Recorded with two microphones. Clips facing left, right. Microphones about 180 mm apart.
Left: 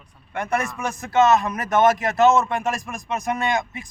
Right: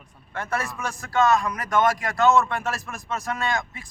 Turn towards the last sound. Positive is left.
turn(degrees=20)  # may be behind; listen again after turning